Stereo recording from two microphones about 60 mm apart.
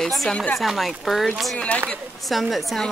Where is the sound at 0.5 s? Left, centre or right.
Centre.